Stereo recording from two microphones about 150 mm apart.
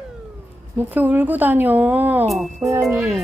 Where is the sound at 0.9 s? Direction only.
10° right (ahead or behind).